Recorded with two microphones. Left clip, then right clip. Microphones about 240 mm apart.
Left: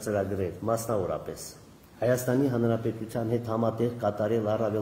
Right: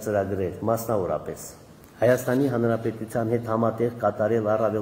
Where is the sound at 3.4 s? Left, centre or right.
Centre.